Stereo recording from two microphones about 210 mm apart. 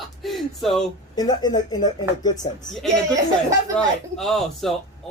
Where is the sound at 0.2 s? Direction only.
Centre (ahead or behind).